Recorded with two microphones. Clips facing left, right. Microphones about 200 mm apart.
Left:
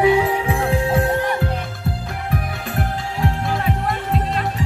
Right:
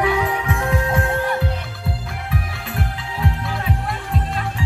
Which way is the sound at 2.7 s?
45° left (ahead or behind).